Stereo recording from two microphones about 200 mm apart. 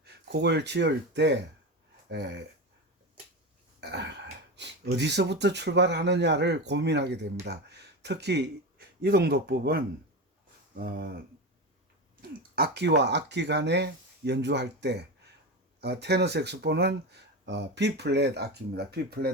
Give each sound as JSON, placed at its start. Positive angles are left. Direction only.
{"t": 0.0, "sound": "speech", "side_deg": -55}
{"t": 3.8, "sound": "speech", "side_deg": -60}
{"t": 10.8, "sound": "a sound", "side_deg": -50}
{"t": 12.5, "sound": "speech", "side_deg": -55}